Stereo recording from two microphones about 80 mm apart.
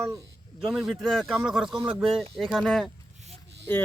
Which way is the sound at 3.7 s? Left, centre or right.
Left.